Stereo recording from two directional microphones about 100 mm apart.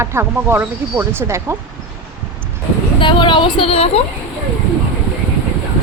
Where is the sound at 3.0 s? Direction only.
55° left (ahead or behind); by 4.0 s 85° left.